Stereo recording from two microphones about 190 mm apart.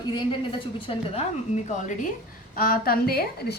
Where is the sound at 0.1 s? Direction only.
25° left (ahead or behind).